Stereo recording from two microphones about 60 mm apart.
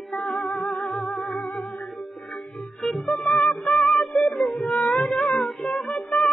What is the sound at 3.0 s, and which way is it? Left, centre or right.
Music, centre.